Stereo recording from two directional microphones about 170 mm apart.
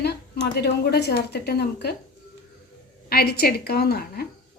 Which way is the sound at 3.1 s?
65° left (ahead or behind).